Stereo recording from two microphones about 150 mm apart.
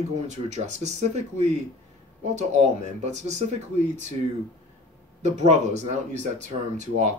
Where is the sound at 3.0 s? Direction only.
50° right (ahead or behind).